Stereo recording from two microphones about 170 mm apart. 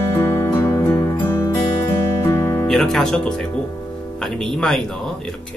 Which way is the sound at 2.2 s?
15° left (ahead or behind).